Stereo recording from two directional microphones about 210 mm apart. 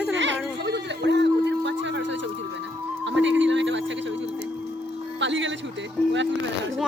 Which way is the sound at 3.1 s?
60° right (ahead or behind).